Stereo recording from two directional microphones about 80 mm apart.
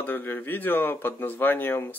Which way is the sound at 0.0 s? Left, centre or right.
Left.